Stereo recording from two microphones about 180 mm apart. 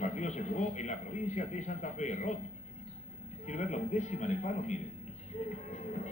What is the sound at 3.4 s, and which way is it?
A man's voice, 40° left (ahead or behind).